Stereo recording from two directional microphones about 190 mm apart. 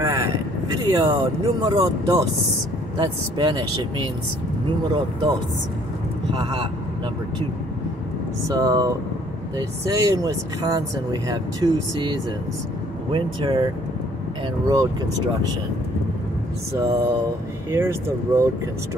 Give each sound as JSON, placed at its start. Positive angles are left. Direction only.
{"t": 0.0, "sound": "speech", "side_deg": -15}
{"t": 4.6, "sound": "speech", "side_deg": -25}
{"t": 6.3, "sound": "speech", "side_deg": -25}
{"t": 8.5, "sound": "speech", "side_deg": -20}
{"t": 16.7, "sound": "speech", "side_deg": -15}